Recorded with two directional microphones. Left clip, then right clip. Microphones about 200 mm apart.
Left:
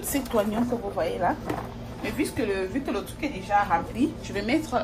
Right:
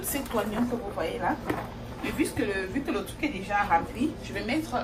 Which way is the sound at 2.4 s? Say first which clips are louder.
Left 2 dB; 40° left (ahead or behind).